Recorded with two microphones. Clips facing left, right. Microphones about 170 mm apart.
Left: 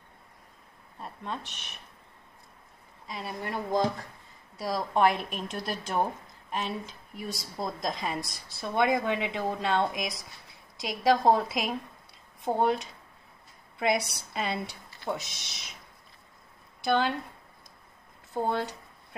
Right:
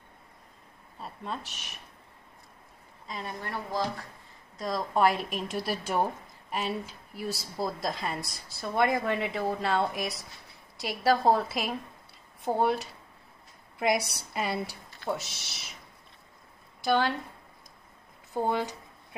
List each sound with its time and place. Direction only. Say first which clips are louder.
0.9 s speech: even; 5° right (ahead or behind)
3.1 s speech: left 1 dB; 10° left (ahead or behind)
4.6 s a woman's voice: left 1 dB; centre (ahead or behind)
16.8 s a woman's voice: even; 5° right (ahead or behind)
18.4 s a woman's voice: right 1 dB; 10° right (ahead or behind)